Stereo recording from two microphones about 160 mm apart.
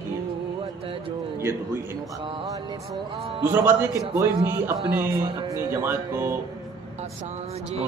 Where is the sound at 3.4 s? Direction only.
15° right (ahead or behind).